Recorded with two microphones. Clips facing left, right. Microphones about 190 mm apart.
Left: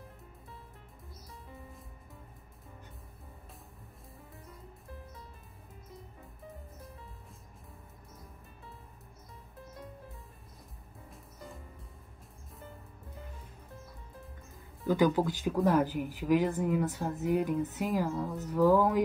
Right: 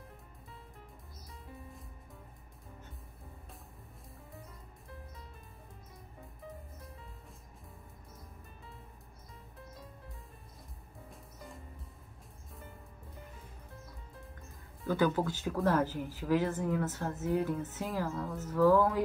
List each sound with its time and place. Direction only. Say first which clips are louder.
11.1 s music: left 2 dB; centre (ahead or behind)
14.9 s speech: left 3 dB; 15° left (ahead or behind)
18.1 s speech: left 3 dB; centre (ahead or behind)
18.5 s speech: left 1 dB; 15° left (ahead or behind)